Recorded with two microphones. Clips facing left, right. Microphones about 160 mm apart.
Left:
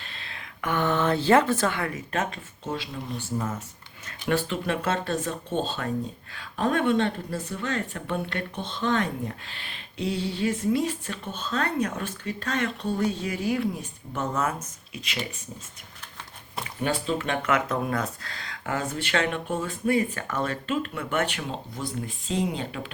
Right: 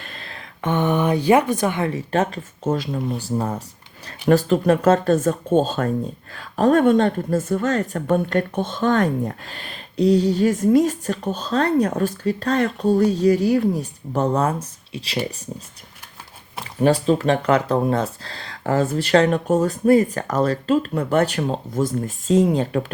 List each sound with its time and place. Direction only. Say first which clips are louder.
0.0 s a sound: right 5 dB; 45° right (ahead or behind)
0.6 s a woman's voice: right 5 dB; 20° right (ahead or behind)
1.9 s speech: right 8 dB; 35° right (ahead or behind)
16.8 s speech: right 10 dB; 35° right (ahead or behind)